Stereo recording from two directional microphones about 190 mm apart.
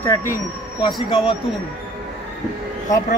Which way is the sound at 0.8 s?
25° left (ahead or behind).